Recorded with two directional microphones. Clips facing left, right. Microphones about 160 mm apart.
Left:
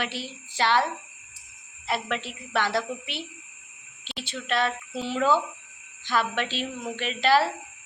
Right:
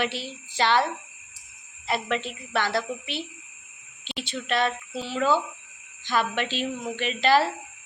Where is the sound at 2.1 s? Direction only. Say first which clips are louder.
Right 1 dB; 10° left (ahead or behind).